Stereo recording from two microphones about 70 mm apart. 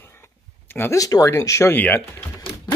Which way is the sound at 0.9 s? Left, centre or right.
Left.